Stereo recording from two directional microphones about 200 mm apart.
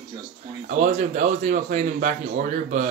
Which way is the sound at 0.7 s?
35° right (ahead or behind).